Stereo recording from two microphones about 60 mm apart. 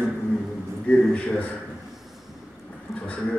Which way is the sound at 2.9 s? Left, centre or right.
Centre.